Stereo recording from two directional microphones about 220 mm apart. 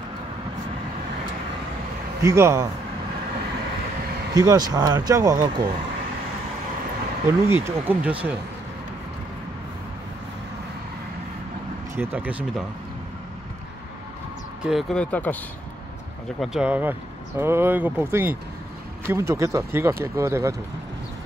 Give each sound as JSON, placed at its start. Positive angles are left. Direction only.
{"t": 2.2, "sound": "speech", "side_deg": -15}
{"t": 4.3, "sound": "speech", "side_deg": -15}
{"t": 7.2, "sound": "speech", "side_deg": -10}
{"t": 11.9, "sound": "speech", "side_deg": -10}
{"t": 14.6, "sound": "speech", "side_deg": 0}
{"t": 16.3, "sound": "speech", "side_deg": -5}